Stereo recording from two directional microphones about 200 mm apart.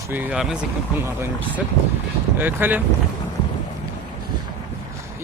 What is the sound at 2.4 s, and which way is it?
Speech, 10° right (ahead or behind).